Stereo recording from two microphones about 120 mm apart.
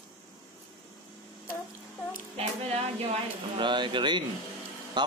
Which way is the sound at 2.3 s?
55° right (ahead or behind).